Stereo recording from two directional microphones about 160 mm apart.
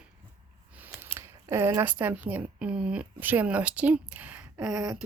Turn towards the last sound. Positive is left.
turn(degrees=-5)  # may be behind; listen again after turning